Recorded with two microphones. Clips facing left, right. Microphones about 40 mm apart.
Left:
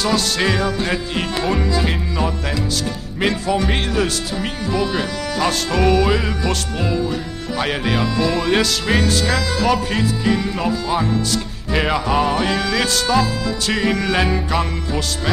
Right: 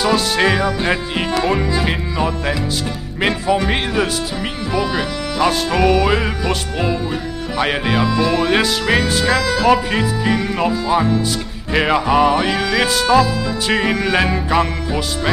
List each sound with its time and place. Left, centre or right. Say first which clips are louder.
0.0 s speech: right 3 dB; centre
10.3 s speech: right 2 dB; right
10.9 s speech: right 3 dB; centre